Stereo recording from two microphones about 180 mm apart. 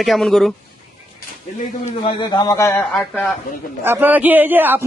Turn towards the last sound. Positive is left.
turn(degrees=-10)  # may be behind; listen again after turning